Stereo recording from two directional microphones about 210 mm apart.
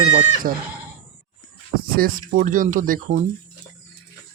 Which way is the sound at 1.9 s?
45° right (ahead or behind).